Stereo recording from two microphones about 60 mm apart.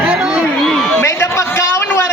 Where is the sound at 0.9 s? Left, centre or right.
Left.